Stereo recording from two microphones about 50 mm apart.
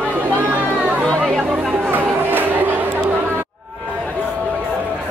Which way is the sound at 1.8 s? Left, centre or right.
Right.